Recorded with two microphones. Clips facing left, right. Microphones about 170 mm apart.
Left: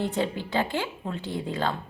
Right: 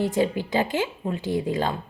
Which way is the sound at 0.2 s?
15° right (ahead or behind).